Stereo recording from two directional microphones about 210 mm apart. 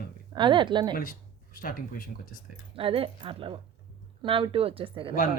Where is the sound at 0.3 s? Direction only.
20° right (ahead or behind).